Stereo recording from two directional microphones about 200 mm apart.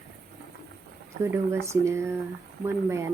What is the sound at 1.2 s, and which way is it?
Speech, 15° right (ahead or behind).